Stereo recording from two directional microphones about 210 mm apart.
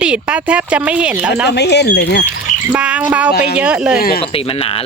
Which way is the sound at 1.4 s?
55° left (ahead or behind).